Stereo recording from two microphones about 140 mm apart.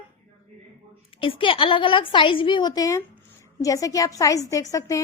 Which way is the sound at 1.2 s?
40° left (ahead or behind).